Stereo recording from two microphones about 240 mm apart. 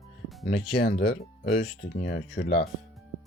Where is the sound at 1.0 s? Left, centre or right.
Left.